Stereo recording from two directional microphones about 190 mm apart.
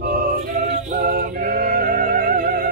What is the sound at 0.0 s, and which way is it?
A capella, 45° right (ahead or behind).